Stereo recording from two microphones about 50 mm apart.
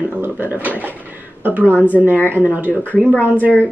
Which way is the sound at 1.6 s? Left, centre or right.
Left.